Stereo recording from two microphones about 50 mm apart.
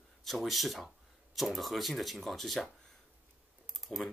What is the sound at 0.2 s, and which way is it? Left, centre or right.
Speech, centre.